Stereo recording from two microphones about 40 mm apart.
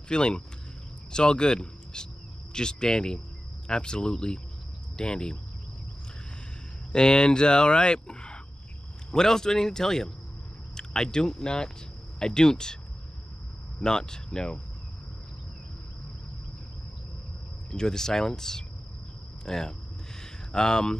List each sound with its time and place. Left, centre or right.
0.1 s speech: left
6.9 s speech: centre
9.1 s a man's voice: centre
13.7 s a man's voice: centre
17.6 s a man's voice: centre
20.2 s a sound: centre